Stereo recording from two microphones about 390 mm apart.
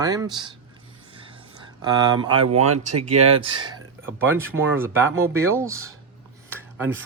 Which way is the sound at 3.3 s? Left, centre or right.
Centre.